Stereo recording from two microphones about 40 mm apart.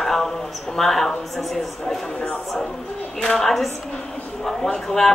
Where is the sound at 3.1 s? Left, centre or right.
Centre.